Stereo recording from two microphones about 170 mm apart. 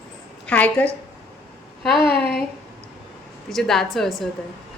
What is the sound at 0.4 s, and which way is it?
A woman's voice, 10° left (ahead or behind).